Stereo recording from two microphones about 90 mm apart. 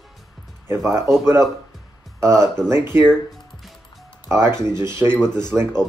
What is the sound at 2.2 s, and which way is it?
Speech, 30° right (ahead or behind).